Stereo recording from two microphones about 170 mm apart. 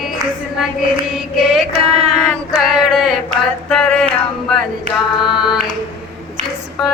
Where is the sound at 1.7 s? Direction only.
40° right (ahead or behind).